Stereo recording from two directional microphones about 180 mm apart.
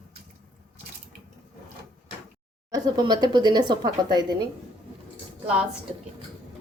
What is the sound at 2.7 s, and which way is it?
Speech, 25° right (ahead or behind).